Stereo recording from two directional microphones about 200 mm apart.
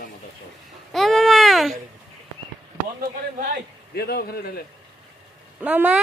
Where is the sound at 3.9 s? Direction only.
50° left (ahead or behind).